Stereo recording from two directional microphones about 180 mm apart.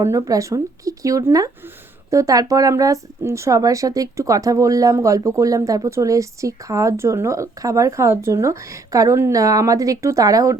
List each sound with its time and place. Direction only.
0.0 s a woman's voice: 15° right (ahead or behind)